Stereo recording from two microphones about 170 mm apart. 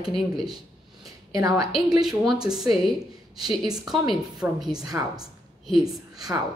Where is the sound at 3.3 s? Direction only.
25° right (ahead or behind).